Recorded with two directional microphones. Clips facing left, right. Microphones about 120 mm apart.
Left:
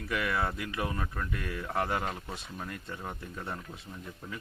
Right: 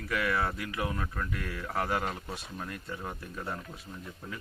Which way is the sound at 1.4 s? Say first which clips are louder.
Left 1 dB; 15° left (ahead or behind).